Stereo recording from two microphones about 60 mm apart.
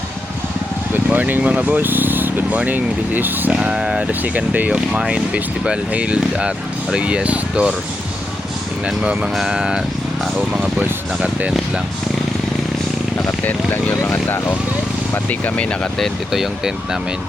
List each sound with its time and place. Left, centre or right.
0.9 s vehicle: right
1.4 s speech: right
3.5 s speech: centre
4.1 s speech: right
9.3 s speech: centre
10.6 s speech: right
13.4 s speech: left
14.0 s speech: left
15.3 s speech: left
16.3 s speech: centre